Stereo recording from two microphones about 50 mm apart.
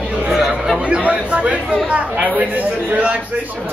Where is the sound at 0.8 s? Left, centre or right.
Right.